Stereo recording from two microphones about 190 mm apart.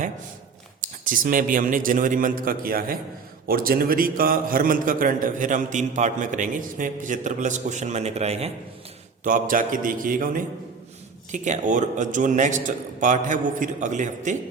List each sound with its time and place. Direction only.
0.8 s a man's voice: 45° right (ahead or behind)
9.2 s a man's voice: 45° right (ahead or behind)